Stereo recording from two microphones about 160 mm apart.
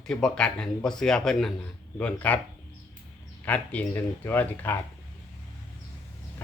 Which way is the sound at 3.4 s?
10° left (ahead or behind).